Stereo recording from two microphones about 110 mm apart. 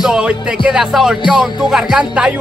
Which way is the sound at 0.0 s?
10° right (ahead or behind).